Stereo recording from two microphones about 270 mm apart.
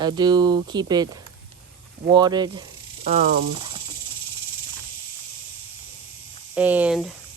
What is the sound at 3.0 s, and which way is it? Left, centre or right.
Speech, right.